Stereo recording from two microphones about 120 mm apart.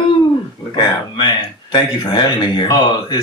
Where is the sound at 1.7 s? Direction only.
40° left (ahead or behind).